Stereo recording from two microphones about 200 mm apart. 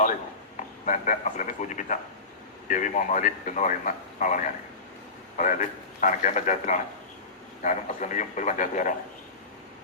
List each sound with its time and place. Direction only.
0.9 s a man's voice: 40° left (ahead or behind)